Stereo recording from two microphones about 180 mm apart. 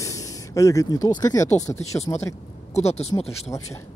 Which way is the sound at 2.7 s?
35° left (ahead or behind).